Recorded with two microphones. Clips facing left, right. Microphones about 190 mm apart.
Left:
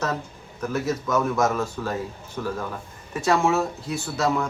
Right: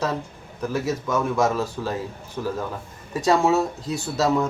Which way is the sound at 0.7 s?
10° right (ahead or behind).